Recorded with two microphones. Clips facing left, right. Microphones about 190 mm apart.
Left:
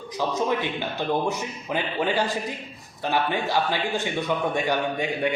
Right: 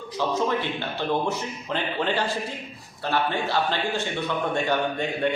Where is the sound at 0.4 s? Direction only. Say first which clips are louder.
Left 1 dB; 15° left (ahead or behind).